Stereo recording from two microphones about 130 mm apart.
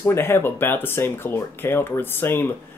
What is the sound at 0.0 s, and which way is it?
Speech, 20° left (ahead or behind).